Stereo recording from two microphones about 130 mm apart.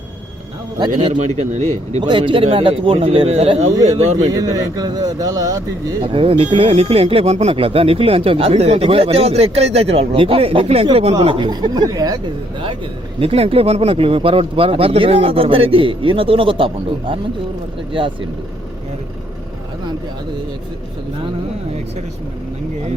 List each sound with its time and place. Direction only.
0.8 s speech: 40° right (ahead or behind)
1.4 s speech: 60° right (ahead or behind)
2.0 s speech: 40° right (ahead or behind); by 4.3 s 55° right (ahead or behind)
4.3 s speech: 30° right (ahead or behind)
6.0 s speech: 45° right (ahead or behind); by 12.6 s 30° right (ahead or behind)
13.1 s speech: 50° right (ahead or behind)